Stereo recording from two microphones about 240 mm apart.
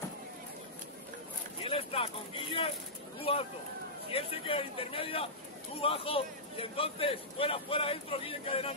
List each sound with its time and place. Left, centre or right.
1.6 s speech: left